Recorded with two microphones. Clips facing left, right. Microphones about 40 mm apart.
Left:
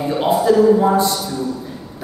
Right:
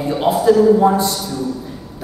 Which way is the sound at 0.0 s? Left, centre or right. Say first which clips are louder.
Right 1 dB; centre.